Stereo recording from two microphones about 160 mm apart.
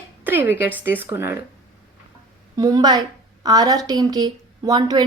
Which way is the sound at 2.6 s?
20° right (ahead or behind).